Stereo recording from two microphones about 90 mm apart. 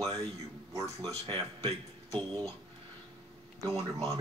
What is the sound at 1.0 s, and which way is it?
Speech, 60° right (ahead or behind).